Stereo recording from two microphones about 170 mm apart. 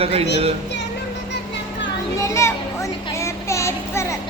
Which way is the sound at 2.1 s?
15° left (ahead or behind).